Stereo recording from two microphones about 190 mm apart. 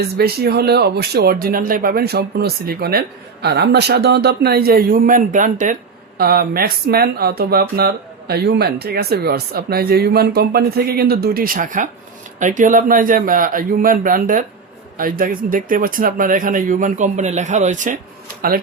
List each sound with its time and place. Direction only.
0.2 s speech: 55° right (ahead or behind); by 17.9 s 40° right (ahead or behind)